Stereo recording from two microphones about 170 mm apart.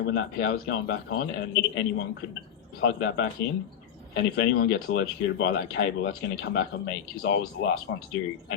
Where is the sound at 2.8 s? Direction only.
90° left.